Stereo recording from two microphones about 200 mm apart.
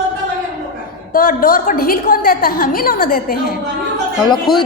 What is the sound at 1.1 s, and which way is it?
A woman's voice, 45° left (ahead or behind).